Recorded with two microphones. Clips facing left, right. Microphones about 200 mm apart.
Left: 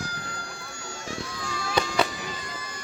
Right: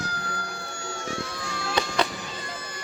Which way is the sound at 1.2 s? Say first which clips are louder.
Right 1 dB; 65° right (ahead or behind).